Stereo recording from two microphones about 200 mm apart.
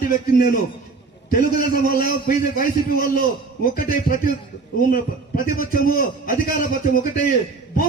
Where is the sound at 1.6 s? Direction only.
45° left (ahead or behind).